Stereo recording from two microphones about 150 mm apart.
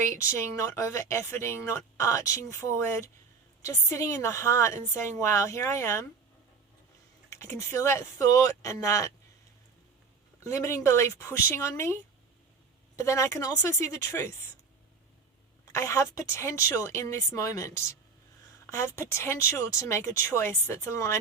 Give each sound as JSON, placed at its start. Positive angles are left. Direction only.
{"t": 0.1, "sound": "speech", "side_deg": 20}
{"t": 7.3, "sound": "speech", "side_deg": 20}
{"t": 10.4, "sound": "speech", "side_deg": 20}
{"t": 13.0, "sound": "speech", "side_deg": 20}
{"t": 15.6, "sound": "speech", "side_deg": 20}